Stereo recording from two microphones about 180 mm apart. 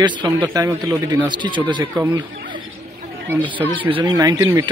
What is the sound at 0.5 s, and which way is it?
Speech, 15° right (ahead or behind).